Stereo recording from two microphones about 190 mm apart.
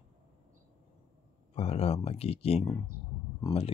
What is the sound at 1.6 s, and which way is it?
Speech, 30° left (ahead or behind).